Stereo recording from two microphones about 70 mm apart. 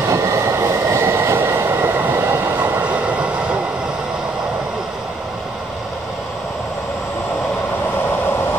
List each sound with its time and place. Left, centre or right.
0.1 s train: right
2.5 s train: right